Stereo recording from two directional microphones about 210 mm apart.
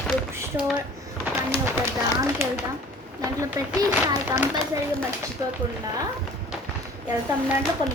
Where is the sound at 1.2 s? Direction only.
10° right (ahead or behind).